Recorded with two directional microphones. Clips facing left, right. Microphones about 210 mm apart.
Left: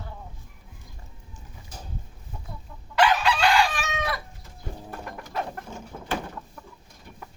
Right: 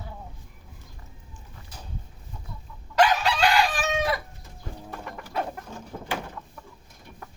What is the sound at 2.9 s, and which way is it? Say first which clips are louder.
Chicken: even; 40° right (ahead or behind).